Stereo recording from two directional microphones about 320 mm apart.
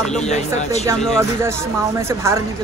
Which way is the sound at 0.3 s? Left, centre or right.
Left.